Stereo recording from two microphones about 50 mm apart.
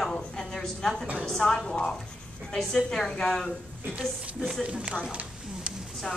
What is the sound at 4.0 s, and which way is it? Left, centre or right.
Speech, centre.